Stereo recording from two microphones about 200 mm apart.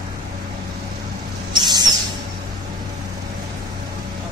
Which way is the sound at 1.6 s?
20° right (ahead or behind).